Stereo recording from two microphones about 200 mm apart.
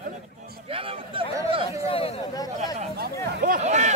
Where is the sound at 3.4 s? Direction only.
40° right (ahead or behind).